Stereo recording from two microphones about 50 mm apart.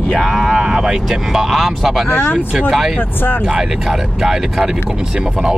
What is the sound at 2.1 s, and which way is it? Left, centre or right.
Speech, left.